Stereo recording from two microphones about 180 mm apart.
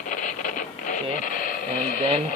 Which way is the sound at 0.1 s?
45° left (ahead or behind).